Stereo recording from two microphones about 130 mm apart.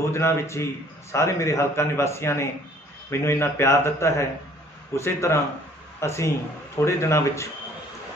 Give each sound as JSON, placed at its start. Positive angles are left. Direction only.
{"t": 0.1, "sound": "a man's voice", "side_deg": 20}